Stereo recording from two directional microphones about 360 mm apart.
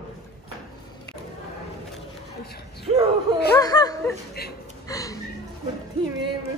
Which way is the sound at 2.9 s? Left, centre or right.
Centre.